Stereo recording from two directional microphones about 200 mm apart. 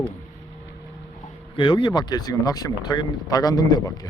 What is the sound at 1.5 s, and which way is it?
Speech, 25° left (ahead or behind).